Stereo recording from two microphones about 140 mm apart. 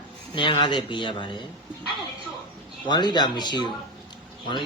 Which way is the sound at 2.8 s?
30° left (ahead or behind).